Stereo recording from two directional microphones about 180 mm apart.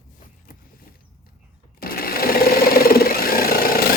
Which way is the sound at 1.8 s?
55° left (ahead or behind).